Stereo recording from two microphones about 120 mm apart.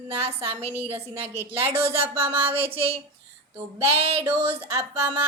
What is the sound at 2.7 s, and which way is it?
Speech, 50° right (ahead or behind).